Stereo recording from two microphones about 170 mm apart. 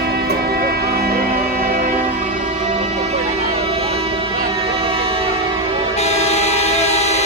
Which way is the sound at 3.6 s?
35° right (ahead or behind).